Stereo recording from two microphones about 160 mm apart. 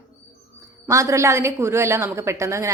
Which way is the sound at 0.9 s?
20° right (ahead or behind).